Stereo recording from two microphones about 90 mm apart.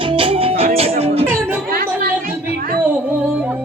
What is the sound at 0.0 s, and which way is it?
Music, 75° right (ahead or behind).